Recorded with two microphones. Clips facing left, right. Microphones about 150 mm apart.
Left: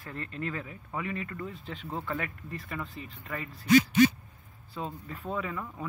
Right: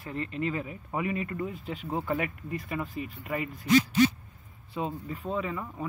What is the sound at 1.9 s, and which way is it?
Speech, 25° right (ahead or behind).